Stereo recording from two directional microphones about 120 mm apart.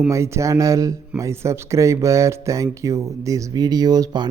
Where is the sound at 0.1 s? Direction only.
25° right (ahead or behind).